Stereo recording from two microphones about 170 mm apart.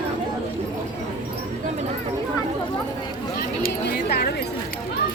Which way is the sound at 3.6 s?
60° left (ahead or behind).